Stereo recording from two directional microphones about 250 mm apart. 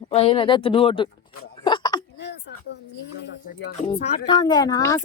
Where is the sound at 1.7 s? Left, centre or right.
Centre.